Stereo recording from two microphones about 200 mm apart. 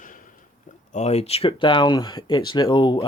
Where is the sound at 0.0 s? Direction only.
40° left (ahead or behind).